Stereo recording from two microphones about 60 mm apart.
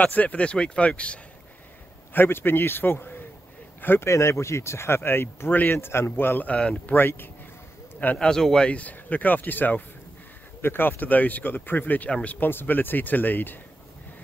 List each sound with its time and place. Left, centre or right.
0.0 s speech: left
2.1 s speech: left
4.1 s speech: left
6.5 s speech: centre
6.9 s speech: left
8.2 s speech: centre
8.6 s speech: left
12.1 s speech: left
12.4 s speech: left